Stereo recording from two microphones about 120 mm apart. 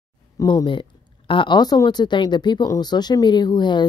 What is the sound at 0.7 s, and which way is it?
Speech, 45° left (ahead or behind).